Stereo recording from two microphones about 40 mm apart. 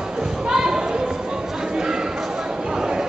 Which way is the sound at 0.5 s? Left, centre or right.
Centre.